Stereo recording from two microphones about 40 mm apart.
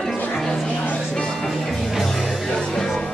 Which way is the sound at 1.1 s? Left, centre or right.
Centre.